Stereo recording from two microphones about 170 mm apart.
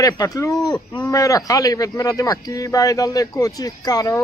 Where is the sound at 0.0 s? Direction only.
20° left (ahead or behind).